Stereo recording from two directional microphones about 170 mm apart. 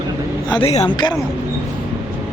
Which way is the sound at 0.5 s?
35° left (ahead or behind).